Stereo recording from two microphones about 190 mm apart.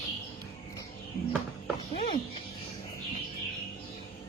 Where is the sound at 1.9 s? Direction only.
30° left (ahead or behind).